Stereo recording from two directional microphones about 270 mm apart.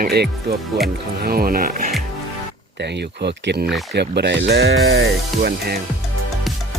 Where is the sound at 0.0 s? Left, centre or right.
Right.